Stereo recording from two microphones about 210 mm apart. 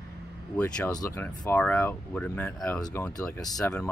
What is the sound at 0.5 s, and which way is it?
Speech, 5° left (ahead or behind).